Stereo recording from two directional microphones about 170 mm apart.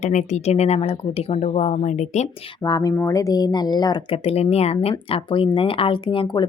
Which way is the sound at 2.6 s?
20° left (ahead or behind).